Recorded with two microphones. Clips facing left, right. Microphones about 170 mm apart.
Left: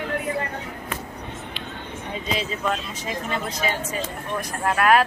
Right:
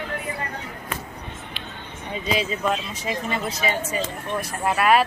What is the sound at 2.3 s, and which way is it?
Speech, 10° right (ahead or behind).